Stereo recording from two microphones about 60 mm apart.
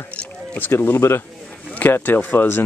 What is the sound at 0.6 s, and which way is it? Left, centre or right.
Speech, left.